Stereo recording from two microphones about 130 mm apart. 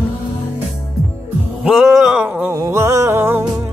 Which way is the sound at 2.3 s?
15° right (ahead or behind).